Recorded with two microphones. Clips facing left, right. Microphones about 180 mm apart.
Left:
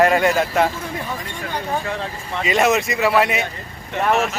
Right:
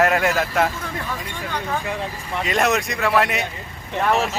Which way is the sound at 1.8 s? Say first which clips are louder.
Left 1 dB; 15° right (ahead or behind).